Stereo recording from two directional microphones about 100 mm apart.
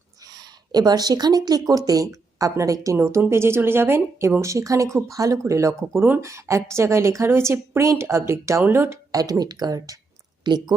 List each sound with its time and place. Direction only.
0.3 s speech: 40° right (ahead or behind); by 9.0 s 25° right (ahead or behind)
9.1 s speech: 40° right (ahead or behind)
10.4 s speech: 45° right (ahead or behind)